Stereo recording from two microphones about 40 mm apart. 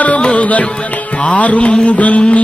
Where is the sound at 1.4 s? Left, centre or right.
Left.